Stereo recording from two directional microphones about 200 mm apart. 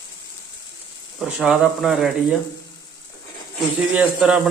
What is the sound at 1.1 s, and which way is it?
A man's voice, 5° right (ahead or behind).